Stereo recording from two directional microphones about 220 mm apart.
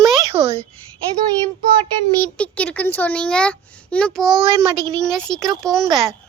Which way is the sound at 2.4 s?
5° left (ahead or behind).